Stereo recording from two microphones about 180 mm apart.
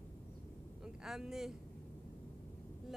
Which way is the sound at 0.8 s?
5° right (ahead or behind).